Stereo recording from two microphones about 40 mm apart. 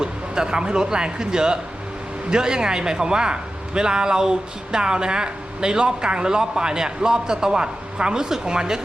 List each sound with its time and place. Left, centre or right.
0.0 s speech: centre